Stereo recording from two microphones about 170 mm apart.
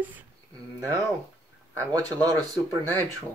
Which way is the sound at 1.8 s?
20° right (ahead or behind).